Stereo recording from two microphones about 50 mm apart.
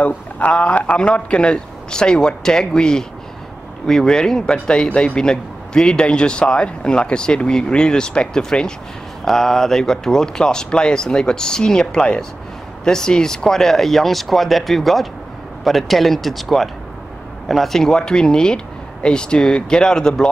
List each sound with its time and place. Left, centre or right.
0.0 s a man's voice: left